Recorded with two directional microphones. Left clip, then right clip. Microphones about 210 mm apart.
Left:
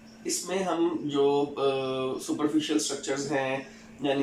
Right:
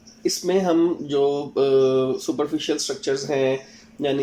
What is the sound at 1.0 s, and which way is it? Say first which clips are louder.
Speech: right 3 dB; 50° right (ahead or behind).